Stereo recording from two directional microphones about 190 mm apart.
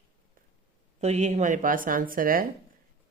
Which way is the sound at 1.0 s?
35° right (ahead or behind).